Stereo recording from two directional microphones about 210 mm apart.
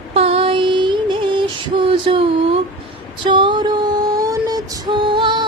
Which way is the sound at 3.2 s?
25° right (ahead or behind).